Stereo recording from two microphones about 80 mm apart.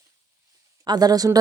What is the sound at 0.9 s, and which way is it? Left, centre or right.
Speech, right.